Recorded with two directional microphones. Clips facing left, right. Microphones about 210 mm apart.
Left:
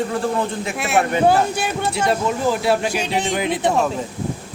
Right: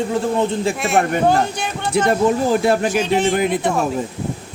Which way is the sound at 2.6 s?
50° right (ahead or behind).